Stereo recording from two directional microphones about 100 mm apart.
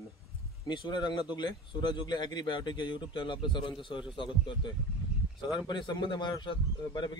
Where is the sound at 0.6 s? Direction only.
50° left (ahead or behind).